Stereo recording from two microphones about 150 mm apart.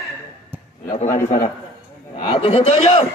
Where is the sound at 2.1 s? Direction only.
40° left (ahead or behind).